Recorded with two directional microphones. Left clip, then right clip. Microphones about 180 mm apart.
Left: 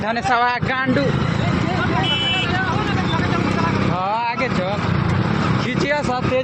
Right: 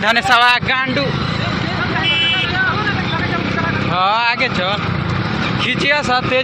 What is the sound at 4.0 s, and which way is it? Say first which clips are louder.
Vehicle: right 9 dB; 5° right (ahead or behind).